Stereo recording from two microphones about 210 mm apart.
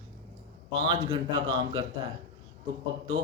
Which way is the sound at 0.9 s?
20° right (ahead or behind).